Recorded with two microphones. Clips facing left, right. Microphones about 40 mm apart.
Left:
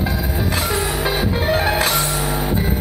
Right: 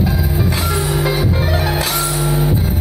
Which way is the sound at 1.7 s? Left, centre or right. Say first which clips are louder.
Left 1 dB; left.